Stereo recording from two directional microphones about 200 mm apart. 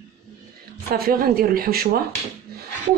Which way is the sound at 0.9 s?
50° right (ahead or behind).